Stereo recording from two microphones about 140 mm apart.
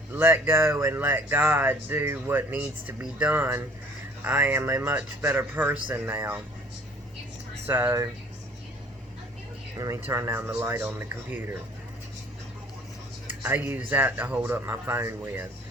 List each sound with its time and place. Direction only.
0.1 s speech: 15° right (ahead or behind)
7.9 s speech: 25° right (ahead or behind)
9.7 s speech: 25° right (ahead or behind)
13.4 s speech: 10° right (ahead or behind)